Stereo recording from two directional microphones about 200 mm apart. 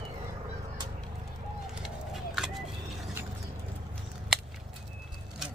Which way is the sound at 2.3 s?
Centre (ahead or behind).